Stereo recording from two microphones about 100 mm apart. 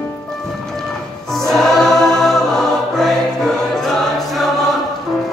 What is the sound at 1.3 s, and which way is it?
Choir, 5° left (ahead or behind).